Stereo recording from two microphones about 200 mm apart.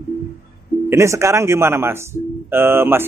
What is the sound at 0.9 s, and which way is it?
Speech, 15° right (ahead or behind).